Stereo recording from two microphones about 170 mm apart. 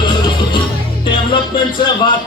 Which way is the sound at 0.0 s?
30° left (ahead or behind).